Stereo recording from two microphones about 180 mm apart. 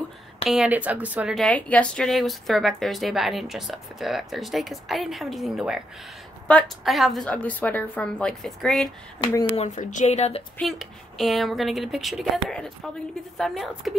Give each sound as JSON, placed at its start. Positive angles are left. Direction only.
{"t": 0.5, "sound": "speech", "side_deg": -5}
{"t": 9.2, "sound": "speech", "side_deg": 25}
{"t": 9.6, "sound": "speech", "side_deg": 45}
{"t": 10.6, "sound": "speech", "side_deg": 0}